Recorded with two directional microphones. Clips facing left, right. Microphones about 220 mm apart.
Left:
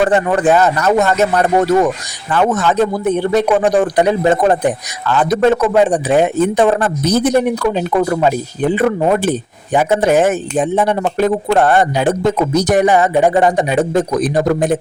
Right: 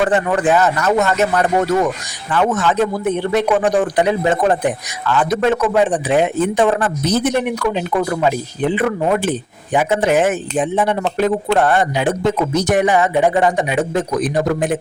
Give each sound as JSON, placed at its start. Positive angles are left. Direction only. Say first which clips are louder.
{"t": 0.0, "sound": "a man's voice", "louder": "left 3 dB", "side_deg": 40}